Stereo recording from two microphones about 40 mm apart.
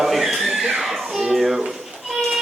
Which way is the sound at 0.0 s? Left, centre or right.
Centre.